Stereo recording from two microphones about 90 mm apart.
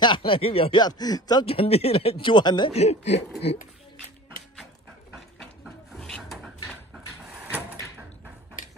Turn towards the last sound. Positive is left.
turn(degrees=-20)  # may be behind; listen again after turning